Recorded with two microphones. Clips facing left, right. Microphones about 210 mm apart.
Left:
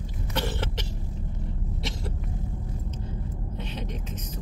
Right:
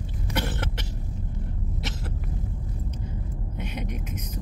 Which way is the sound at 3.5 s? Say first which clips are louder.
Right 3 dB; 10° right (ahead or behind).